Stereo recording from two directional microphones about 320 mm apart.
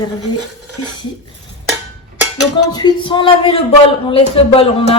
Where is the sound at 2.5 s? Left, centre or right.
Centre.